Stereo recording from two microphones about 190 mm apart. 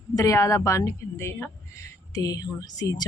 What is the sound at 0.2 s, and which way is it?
A woman's voice, 15° left (ahead or behind).